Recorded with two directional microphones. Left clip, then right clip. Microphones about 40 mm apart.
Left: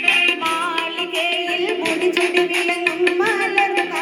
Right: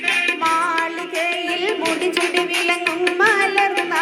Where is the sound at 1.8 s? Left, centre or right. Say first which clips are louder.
Left 3 dB; left.